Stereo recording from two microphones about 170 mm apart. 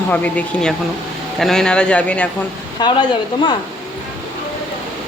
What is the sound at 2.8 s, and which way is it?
Speech, 25° left (ahead or behind).